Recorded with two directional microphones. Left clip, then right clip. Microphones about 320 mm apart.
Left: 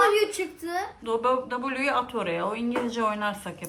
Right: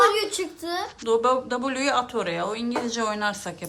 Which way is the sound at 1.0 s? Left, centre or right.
Centre.